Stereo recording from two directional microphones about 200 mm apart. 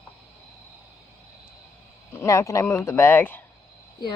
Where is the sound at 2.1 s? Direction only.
15° left (ahead or behind).